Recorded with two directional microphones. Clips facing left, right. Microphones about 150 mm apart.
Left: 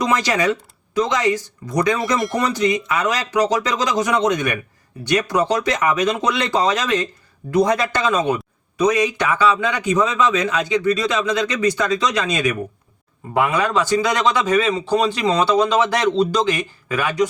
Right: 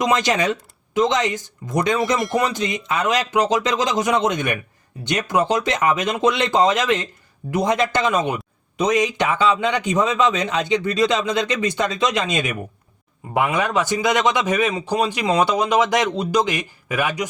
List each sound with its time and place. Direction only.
0.0 s a man's voice: 20° right (ahead or behind)
2.0 s speech: centre (ahead or behind)
2.6 s a man's voice: 20° right (ahead or behind)